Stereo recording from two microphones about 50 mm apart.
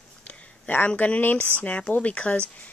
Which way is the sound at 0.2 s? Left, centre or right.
Left.